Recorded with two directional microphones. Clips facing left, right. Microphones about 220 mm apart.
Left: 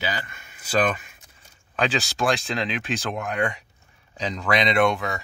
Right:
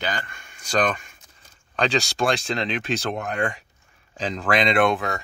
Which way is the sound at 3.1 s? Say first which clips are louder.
Even; 30° right (ahead or behind).